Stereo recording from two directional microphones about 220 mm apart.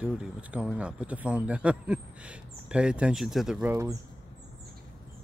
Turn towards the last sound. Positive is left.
turn(degrees=-10)  # may be behind; listen again after turning